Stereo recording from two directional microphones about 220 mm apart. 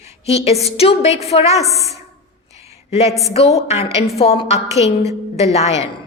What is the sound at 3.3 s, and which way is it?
A woman's voice, 30° left (ahead or behind).